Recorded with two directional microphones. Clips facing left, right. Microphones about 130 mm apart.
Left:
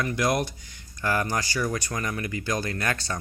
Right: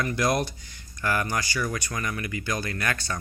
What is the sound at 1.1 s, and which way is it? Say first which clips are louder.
Speech: left 1 dB; 30° left (ahead or behind).